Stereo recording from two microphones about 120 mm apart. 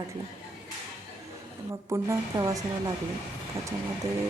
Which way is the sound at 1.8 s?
25° right (ahead or behind).